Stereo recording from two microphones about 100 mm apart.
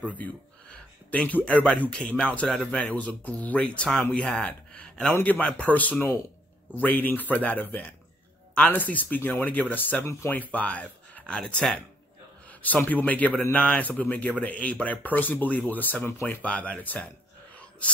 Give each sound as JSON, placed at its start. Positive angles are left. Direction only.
{"t": 0.1, "sound": "speech", "side_deg": 15}
{"t": 17.6, "sound": "whispering", "side_deg": 15}